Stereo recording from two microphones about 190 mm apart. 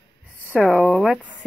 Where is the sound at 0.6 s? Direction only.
Centre (ahead or behind).